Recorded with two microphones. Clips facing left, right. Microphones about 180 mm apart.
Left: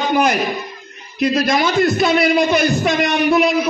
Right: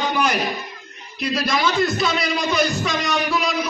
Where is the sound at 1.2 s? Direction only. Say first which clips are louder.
Left 6 dB; 55° left (ahead or behind).